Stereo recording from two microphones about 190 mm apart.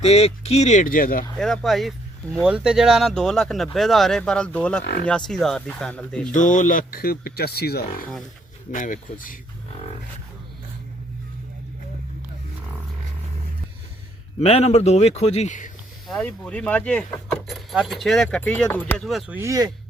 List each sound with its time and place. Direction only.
0.0 s a man's voice: 35° left (ahead or behind)
1.4 s speech: centre (ahead or behind)
4.8 s speech: 60° left (ahead or behind)
5.0 s speech: 5° left (ahead or behind)
6.3 s speech: 40° left (ahead or behind)
8.7 s speech: 45° left (ahead or behind)
14.3 s a man's voice: 30° left (ahead or behind)
16.0 s speech: 5° left (ahead or behind)
19.4 s speech: 20° right (ahead or behind)